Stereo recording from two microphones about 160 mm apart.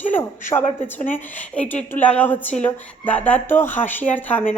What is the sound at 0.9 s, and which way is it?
A woman's voice, 10° left (ahead or behind).